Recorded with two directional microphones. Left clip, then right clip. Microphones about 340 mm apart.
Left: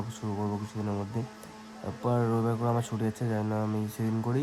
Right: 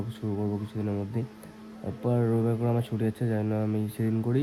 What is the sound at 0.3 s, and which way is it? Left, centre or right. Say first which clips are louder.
Speech: right 1 dB; left.